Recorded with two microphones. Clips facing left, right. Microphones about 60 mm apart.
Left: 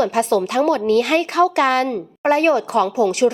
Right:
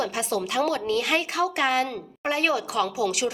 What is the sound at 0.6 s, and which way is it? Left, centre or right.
A woman's voice, left.